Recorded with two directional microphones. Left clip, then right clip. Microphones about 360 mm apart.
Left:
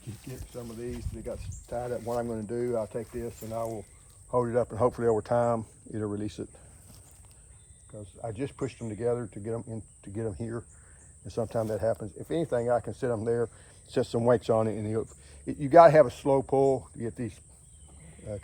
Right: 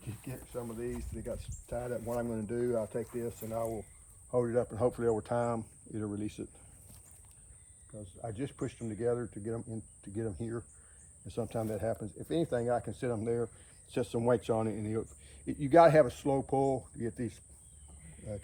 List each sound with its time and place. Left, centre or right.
0.3 s speech: centre
7.9 s speech: centre